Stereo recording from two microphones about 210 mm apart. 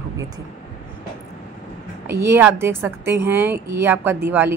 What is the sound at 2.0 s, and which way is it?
A woman's voice, 10° right (ahead or behind).